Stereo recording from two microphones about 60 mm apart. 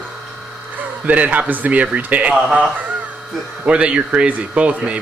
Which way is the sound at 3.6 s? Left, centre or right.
Centre.